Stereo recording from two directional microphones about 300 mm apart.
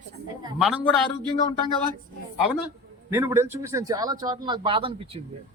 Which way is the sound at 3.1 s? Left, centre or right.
Centre.